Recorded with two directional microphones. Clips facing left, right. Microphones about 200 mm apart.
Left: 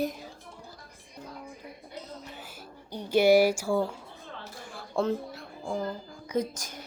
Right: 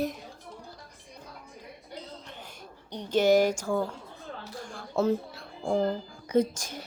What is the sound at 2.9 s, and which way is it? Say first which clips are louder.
A woman's voice: left 2 dB; 10° left (ahead or behind).